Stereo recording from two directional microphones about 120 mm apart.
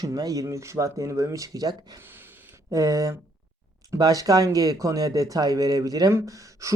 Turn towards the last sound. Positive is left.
turn(degrees=-25)  # may be behind; listen again after turning